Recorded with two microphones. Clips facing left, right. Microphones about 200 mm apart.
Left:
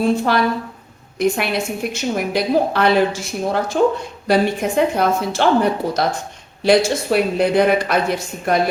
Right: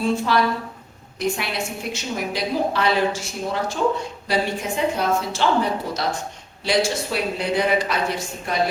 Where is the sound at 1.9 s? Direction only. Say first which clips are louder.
Left 6 dB; 55° left (ahead or behind).